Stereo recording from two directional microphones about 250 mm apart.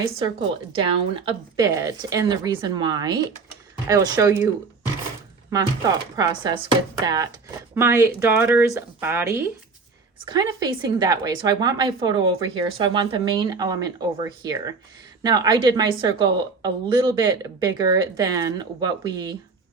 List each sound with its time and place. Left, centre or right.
0.8 s a woman's voice: centre
5.5 s a woman's voice: centre